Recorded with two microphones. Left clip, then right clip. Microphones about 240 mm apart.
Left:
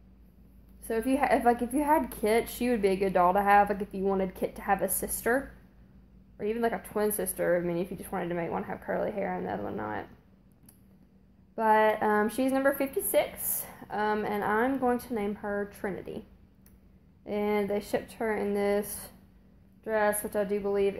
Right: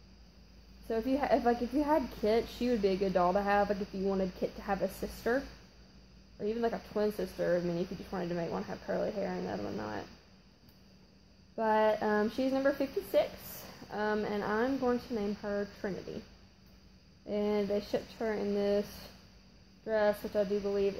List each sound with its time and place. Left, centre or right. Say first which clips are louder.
0.8 s a woman's voice: left 4 dB; left
11.5 s a woman's voice: left 5 dB; centre
17.2 s a woman's voice: left 3 dB; left